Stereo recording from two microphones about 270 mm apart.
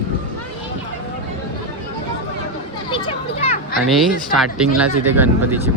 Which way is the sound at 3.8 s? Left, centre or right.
Centre.